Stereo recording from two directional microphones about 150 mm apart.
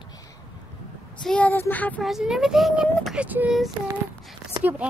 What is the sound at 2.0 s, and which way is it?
Speech, centre (ahead or behind).